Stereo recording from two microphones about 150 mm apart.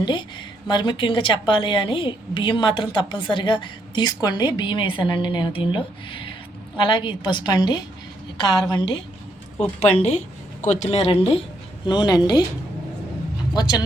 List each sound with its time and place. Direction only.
0.0 s a woman's voice: 30° left (ahead or behind)
9.8 s speech: 45° left (ahead or behind)
11.9 s speech: 30° left (ahead or behind)
13.5 s speech: 25° left (ahead or behind)